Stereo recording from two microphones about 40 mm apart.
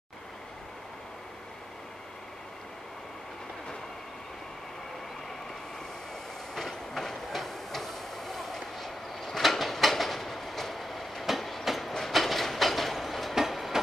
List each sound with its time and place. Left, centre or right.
6.5 s train: centre